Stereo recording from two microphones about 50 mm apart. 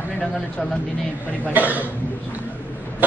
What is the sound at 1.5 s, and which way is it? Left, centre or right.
Speech, right.